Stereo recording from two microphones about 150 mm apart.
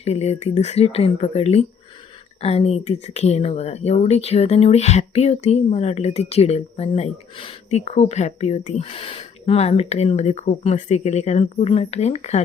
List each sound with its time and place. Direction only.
0.0 s speech: 45° left (ahead or behind)